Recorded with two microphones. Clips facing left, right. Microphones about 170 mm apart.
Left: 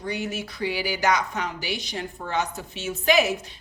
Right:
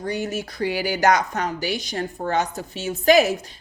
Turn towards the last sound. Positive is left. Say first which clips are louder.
# right 5 dB
turn(degrees=-40)  # may be behind; listen again after turning